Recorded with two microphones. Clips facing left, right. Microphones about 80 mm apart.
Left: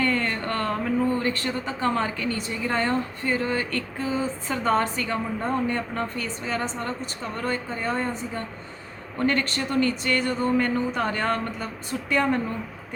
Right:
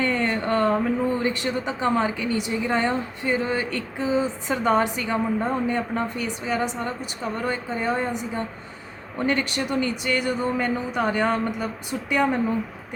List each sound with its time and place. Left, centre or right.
0.0 s speech: centre